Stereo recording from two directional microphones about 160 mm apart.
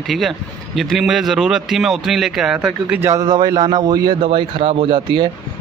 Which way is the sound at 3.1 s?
25° right (ahead or behind).